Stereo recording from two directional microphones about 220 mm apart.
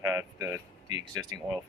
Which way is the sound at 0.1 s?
15° right (ahead or behind).